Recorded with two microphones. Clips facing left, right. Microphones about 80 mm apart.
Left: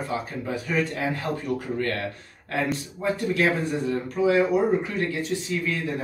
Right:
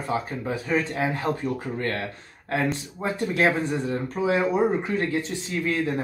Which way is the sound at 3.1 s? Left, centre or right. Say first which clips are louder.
Right 2 dB; right.